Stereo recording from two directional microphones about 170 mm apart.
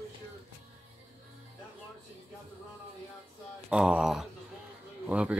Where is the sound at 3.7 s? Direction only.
5° right (ahead or behind).